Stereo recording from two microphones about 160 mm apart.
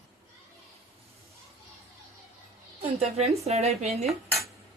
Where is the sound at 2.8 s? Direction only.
40° right (ahead or behind).